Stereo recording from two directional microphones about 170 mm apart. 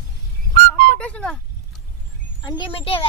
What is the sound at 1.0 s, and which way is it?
Speech, 5° left (ahead or behind).